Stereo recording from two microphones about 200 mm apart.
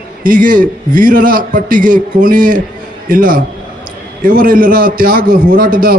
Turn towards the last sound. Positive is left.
turn(degrees=-45)  # may be behind; listen again after turning